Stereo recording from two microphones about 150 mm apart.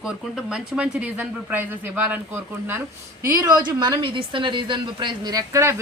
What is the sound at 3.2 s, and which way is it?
A woman's voice, 25° right (ahead or behind).